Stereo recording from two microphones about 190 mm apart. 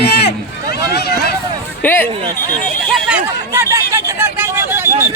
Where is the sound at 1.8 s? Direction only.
10° left (ahead or behind).